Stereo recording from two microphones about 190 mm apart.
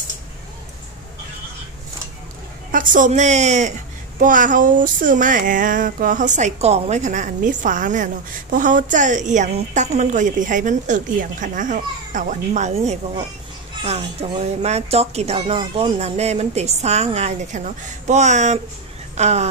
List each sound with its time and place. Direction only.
2.7 s speech: 45° right (ahead or behind)
4.2 s a sound: 45° right (ahead or behind)
13.8 s speech: 35° right (ahead or behind)